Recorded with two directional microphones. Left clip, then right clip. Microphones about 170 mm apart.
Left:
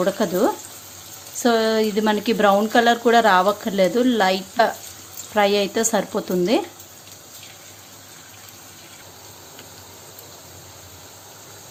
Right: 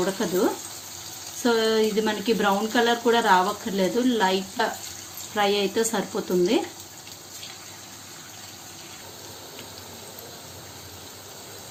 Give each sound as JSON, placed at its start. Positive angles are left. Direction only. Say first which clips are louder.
{"t": 0.0, "sound": "speech", "louder": "left 4 dB", "side_deg": 50}